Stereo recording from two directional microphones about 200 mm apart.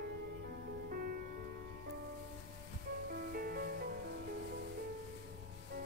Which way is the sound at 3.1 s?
50° right (ahead or behind).